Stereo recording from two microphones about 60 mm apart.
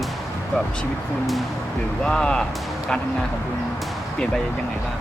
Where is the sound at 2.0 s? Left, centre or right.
Centre.